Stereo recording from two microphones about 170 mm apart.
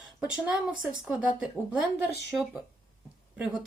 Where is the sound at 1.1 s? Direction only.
5° right (ahead or behind).